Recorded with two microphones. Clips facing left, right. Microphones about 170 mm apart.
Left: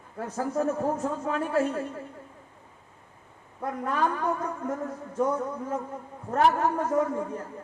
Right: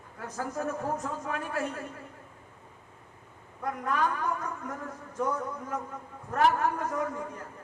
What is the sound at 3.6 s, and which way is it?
Speech, 30° left (ahead or behind).